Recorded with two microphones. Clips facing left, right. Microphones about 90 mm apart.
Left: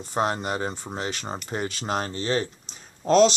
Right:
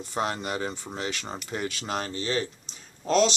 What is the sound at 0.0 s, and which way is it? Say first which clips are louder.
Speech: left 4 dB; 40° left (ahead or behind).